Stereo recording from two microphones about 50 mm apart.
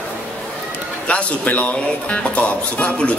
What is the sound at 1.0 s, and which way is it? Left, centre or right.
Speech, left.